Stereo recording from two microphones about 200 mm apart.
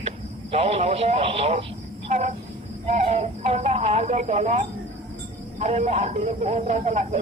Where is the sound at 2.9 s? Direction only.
35° right (ahead or behind).